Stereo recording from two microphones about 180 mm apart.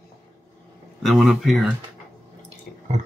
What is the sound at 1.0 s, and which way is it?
Speech, centre (ahead or behind).